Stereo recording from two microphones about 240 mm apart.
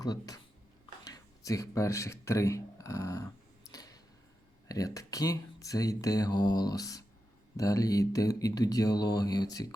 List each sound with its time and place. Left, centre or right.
0.0 s speech: centre
3.7 s a sound: centre
4.7 s speech: centre